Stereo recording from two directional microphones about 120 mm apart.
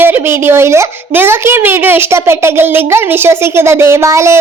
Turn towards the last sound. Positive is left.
turn(degrees=-25)  # may be behind; listen again after turning